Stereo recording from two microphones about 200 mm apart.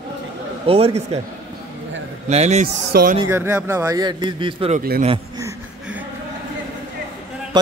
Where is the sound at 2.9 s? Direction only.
50° right (ahead or behind).